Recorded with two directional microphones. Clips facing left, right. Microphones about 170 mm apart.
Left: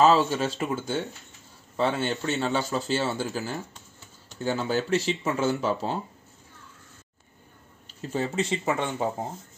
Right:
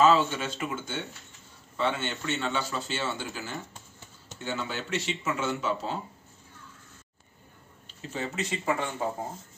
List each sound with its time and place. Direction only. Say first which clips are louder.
0.0 s speech: left 2 dB; 40° left (ahead or behind)
8.1 s speech: left 6 dB; 35° left (ahead or behind)